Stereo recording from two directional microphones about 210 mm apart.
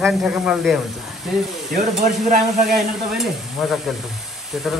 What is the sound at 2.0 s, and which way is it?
Stir, 35° right (ahead or behind).